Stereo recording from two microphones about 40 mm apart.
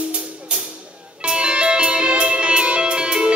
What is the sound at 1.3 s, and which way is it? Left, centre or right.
Music, right.